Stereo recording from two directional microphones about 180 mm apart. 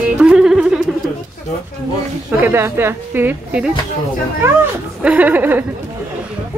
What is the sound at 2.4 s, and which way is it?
A woman's voice, 15° right (ahead or behind).